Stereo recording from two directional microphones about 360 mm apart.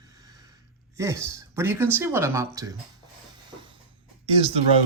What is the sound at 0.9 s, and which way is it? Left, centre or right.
Speech, centre.